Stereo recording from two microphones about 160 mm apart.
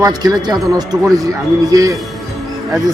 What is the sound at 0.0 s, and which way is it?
Speech, 25° right (ahead or behind).